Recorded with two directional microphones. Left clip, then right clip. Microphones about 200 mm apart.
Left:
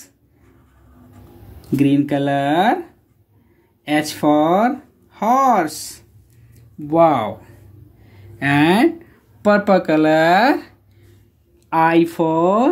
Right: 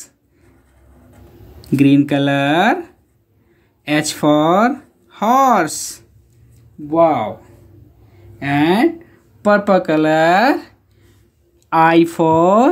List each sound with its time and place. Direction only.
1.8 s speech: 25° right (ahead or behind)
6.9 s speech: 15° left (ahead or behind)
8.4 s speech: 10° left (ahead or behind)
9.4 s speech: 10° right (ahead or behind)
11.7 s speech: 20° right (ahead or behind)